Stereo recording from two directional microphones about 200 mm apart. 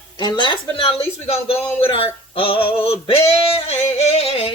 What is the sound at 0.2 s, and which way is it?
Speech, 20° left (ahead or behind).